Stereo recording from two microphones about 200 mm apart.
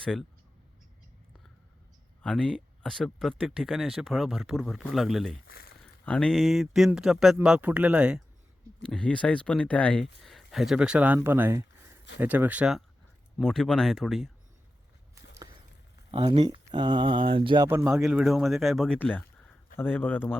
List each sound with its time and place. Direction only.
0.0 s speech: 5° left (ahead or behind)
2.2 s speech: 5° left (ahead or behind)
5.5 s a sound: 50° left (ahead or behind)
5.8 s speech: 5° left (ahead or behind)
16.1 s speech: 30° right (ahead or behind)
17.7 s speech: 10° right (ahead or behind); by 20.4 s 10° left (ahead or behind)